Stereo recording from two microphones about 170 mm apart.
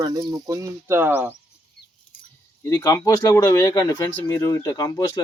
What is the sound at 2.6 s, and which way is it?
Speech, 20° left (ahead or behind).